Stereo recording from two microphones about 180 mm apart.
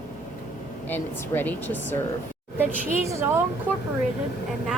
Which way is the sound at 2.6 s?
15° right (ahead or behind).